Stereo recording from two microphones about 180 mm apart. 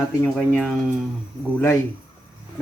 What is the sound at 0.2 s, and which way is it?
Speech, 5° left (ahead or behind).